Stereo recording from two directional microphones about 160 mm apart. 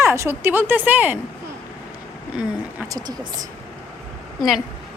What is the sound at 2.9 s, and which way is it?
Speech, 25° right (ahead or behind).